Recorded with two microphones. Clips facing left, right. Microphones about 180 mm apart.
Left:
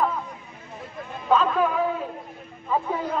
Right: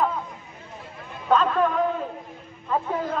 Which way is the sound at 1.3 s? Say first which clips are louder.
Even; 5° left (ahead or behind).